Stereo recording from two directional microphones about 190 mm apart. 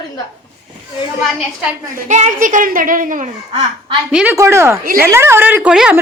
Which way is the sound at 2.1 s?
40° right (ahead or behind).